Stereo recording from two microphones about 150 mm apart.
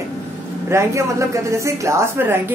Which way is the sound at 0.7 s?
20° right (ahead or behind).